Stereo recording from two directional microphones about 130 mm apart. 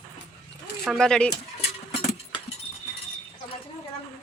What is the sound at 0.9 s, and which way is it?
Speech, 5° left (ahead or behind).